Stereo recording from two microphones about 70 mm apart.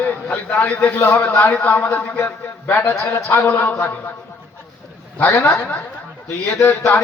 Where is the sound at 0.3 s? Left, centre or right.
Left.